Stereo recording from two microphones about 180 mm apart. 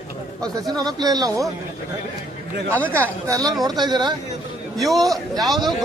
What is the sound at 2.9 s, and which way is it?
Speech, 15° right (ahead or behind).